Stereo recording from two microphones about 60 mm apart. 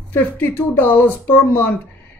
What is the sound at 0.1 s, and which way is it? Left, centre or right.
Speech, left.